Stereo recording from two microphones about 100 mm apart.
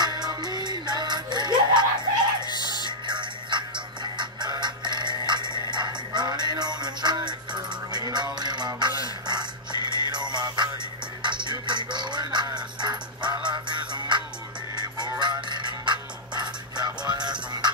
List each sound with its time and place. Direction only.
0.0 s music: 40° right (ahead or behind)
2.4 s music: 45° left (ahead or behind)
3.1 s music: 50° right (ahead or behind)
17.5 s honk: 45° right (ahead or behind)